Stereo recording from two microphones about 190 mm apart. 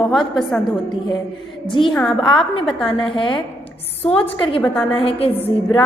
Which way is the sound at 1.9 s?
5° left (ahead or behind).